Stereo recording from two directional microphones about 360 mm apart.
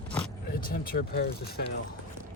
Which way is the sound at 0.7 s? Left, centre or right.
Left.